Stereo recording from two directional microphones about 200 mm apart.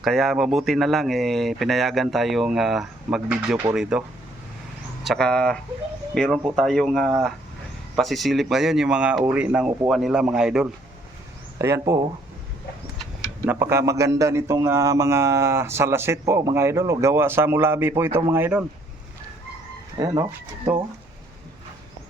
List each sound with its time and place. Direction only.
0.0 s speech: centre (ahead or behind)
5.0 s speech: 5° left (ahead or behind)
11.5 s a man's voice: 15° right (ahead or behind)
13.4 s a man's voice: 10° right (ahead or behind)
20.0 s a man's voice: 20° right (ahead or behind)